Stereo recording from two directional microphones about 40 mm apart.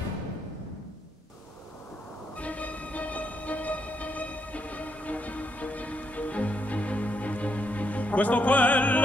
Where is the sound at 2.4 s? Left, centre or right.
Left.